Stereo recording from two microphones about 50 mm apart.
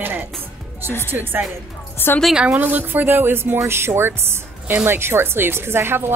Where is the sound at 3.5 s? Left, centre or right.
Right.